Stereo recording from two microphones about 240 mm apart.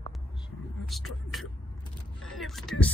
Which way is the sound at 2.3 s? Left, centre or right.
Centre.